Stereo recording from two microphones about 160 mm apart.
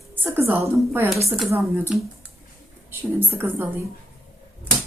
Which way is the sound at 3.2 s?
10° right (ahead or behind).